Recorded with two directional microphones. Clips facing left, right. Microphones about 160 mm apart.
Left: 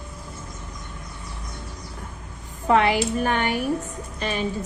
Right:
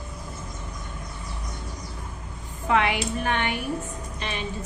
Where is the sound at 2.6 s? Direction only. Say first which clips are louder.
Left 4 dB; 35° left (ahead or behind).